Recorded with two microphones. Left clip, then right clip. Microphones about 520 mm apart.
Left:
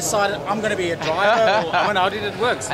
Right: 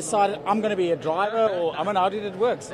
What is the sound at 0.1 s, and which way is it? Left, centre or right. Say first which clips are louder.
Speech: even; right.